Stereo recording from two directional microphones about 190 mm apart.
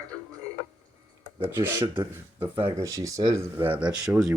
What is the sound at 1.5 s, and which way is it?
Speech, 15° right (ahead or behind).